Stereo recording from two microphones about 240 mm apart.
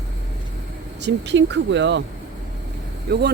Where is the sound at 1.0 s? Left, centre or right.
Right.